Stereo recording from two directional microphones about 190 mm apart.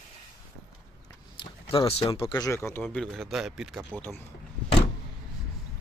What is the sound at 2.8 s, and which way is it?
Speech, centre (ahead or behind).